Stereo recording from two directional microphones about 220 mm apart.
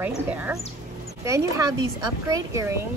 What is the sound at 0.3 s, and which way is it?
Speech, 5° right (ahead or behind).